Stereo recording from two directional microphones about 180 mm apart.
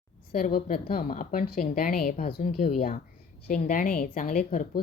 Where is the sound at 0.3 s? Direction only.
50° left (ahead or behind).